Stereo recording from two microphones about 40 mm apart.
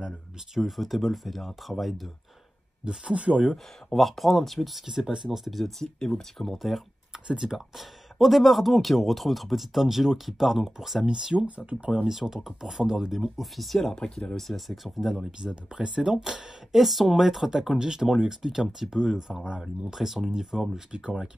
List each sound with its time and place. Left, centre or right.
0.6 s speech: centre
2.8 s speech: right
3.9 s speech: centre
4.8 s speech: centre
5.9 s speech: centre
7.2 s speech: centre
7.5 s speech: centre
11.1 s speech: centre
11.3 s speech: right
11.9 s speech: centre
13.9 s speech: centre
14.7 s speech: centre
15.3 s speech: centre